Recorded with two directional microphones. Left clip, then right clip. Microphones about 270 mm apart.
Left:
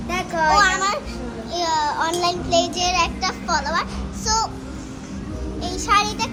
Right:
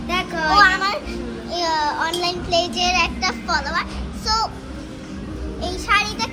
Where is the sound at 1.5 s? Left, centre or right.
Centre.